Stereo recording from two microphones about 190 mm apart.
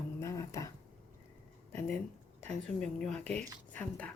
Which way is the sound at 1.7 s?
5° left (ahead or behind).